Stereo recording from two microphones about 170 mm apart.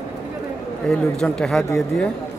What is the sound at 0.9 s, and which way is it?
Speech, 5° left (ahead or behind).